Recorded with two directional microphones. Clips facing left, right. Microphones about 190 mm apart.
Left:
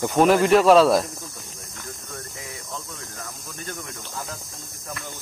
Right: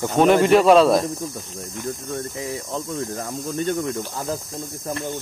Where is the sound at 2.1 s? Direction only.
30° right (ahead or behind).